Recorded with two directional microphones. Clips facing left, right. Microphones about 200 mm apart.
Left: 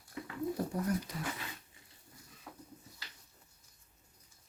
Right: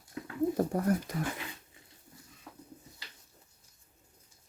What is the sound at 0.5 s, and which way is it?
Speech, 50° right (ahead or behind).